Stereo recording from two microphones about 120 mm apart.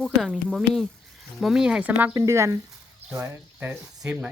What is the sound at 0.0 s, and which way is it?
Speech, centre (ahead or behind).